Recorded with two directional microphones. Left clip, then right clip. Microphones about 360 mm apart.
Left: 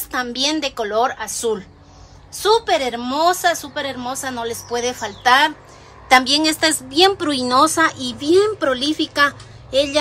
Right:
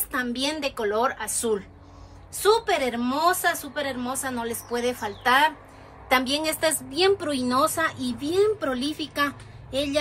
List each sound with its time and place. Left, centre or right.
0.1 s a woman's voice: centre